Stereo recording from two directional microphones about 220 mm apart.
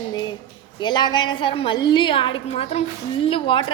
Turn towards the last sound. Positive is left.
turn(degrees=25)  # may be behind; listen again after turning